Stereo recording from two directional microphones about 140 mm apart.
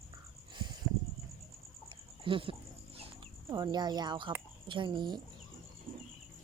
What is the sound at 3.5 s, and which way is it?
Speech, 30° right (ahead or behind).